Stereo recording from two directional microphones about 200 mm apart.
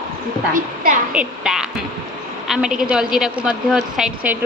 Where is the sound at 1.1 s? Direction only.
5° right (ahead or behind).